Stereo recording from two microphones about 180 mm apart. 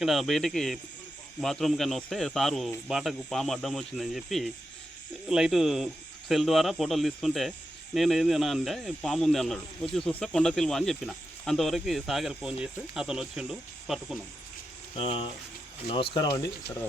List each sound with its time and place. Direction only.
0.0 s speech: centre (ahead or behind)
14.9 s speech: 30° left (ahead or behind)